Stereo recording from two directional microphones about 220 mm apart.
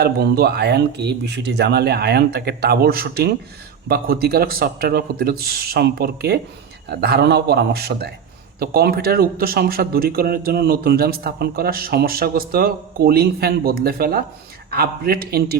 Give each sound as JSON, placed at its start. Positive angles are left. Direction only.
{"t": 0.0, "sound": "a man's voice", "side_deg": -45}